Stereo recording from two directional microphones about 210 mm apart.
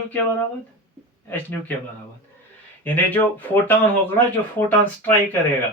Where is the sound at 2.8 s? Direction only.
10° left (ahead or behind).